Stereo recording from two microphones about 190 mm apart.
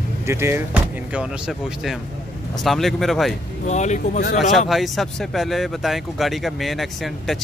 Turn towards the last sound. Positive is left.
turn(degrees=0)  # may be behind; listen again after turning